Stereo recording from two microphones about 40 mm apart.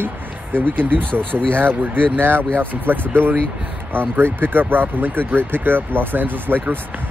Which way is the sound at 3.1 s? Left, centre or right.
Right.